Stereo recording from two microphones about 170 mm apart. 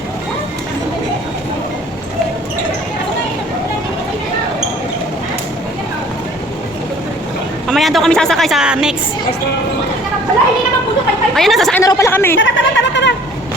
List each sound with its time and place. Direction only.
7.7 s a woman's voice: centre (ahead or behind)
11.3 s a woman's voice: centre (ahead or behind)
11.8 s speech: 20° left (ahead or behind)
12.4 s speech: 90° left